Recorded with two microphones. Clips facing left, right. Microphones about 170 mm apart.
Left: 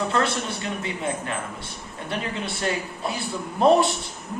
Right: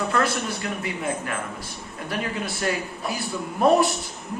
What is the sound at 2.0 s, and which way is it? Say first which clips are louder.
A man's voice: right 1 dB; 25° left (ahead or behind).